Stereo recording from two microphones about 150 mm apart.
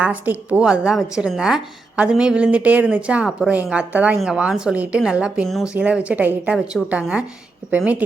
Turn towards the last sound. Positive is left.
turn(degrees=-10)  # may be behind; listen again after turning